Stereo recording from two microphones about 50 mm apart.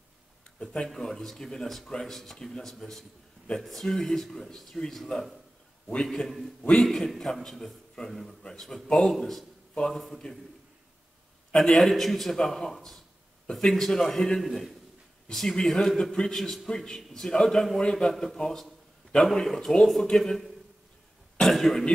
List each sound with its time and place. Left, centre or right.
0.8 s a man's voice: centre
11.5 s a man's voice: centre
13.5 s speech: centre
13.7 s a man's voice: centre